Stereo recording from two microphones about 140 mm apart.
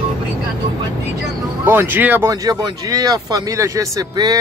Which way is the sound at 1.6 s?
15° right (ahead or behind).